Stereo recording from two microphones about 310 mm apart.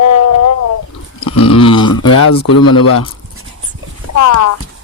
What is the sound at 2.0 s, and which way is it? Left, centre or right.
Speech, left.